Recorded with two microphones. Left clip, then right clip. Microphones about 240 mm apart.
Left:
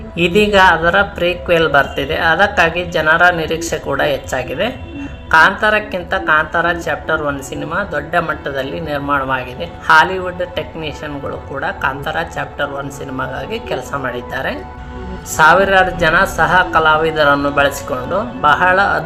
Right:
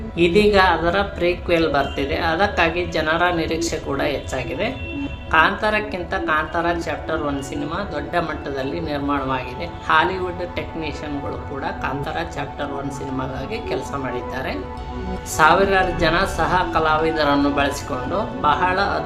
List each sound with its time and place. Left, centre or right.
0.2 s a woman's voice: centre